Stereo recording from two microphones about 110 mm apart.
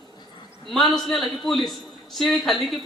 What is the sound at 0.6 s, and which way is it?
A woman's voice, centre (ahead or behind).